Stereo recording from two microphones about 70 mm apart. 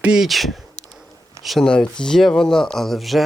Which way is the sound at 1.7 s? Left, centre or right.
Centre.